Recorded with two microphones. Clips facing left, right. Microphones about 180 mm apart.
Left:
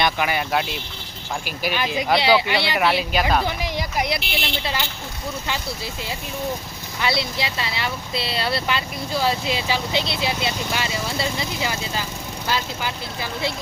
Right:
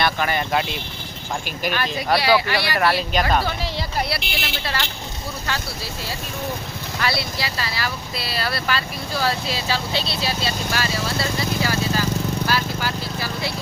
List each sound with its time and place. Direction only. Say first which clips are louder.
0.0 s speech: even; 10° left (ahead or behind)
1.6 s speech: left 1 dB; 10° left (ahead or behind)
4.2 s speech: left 2 dB; centre (ahead or behind)
4.6 s speech: even; 20° left (ahead or behind)